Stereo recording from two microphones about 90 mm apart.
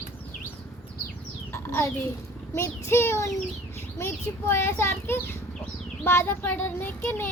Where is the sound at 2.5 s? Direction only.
30° left (ahead or behind).